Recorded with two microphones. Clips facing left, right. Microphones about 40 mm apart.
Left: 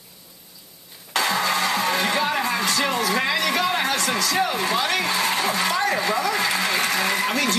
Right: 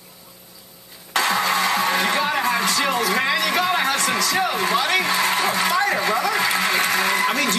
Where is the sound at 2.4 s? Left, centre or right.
Right.